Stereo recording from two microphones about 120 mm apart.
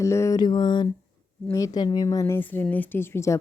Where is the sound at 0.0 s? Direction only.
25° left (ahead or behind).